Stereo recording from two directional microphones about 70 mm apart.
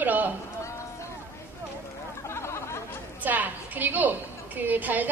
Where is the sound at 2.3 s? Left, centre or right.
Left.